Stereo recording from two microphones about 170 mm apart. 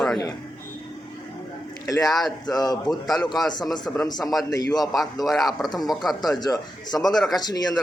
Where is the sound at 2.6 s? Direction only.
25° left (ahead or behind).